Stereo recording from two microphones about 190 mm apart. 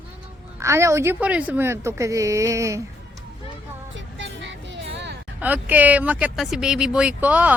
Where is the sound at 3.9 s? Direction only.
75° right (ahead or behind).